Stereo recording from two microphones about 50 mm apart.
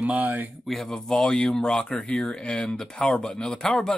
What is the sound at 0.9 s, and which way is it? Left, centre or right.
Speech, centre.